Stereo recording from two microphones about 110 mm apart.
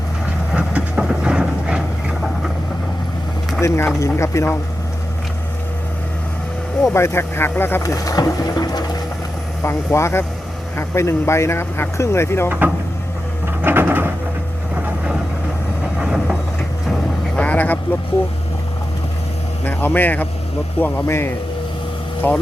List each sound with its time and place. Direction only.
0.5 s train: 10° right (ahead or behind)
3.6 s speech: 25° left (ahead or behind)
6.8 s speech: 25° left (ahead or behind)
7.8 s speech: 30° left (ahead or behind)
9.6 s speech: 25° left (ahead or behind)
12.5 s speech: 15° right (ahead or behind)
13.6 s a sound: 20° right (ahead or behind)
14.8 s vehicle: 10° right (ahead or behind)
16.9 s vehicle: 10° left (ahead or behind)
19.6 s speech: 15° left (ahead or behind)